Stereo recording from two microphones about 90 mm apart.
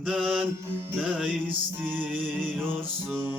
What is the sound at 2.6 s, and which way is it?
Music, 25° right (ahead or behind).